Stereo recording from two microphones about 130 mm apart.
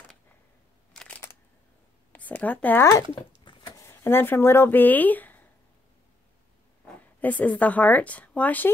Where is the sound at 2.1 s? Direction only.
10° left (ahead or behind).